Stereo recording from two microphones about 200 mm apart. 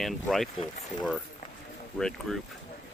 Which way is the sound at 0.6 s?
30° left (ahead or behind).